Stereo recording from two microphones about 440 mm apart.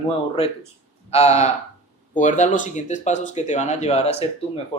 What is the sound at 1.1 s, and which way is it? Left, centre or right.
Speech, centre.